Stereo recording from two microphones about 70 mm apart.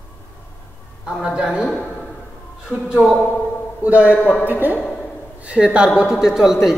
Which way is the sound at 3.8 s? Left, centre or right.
Right.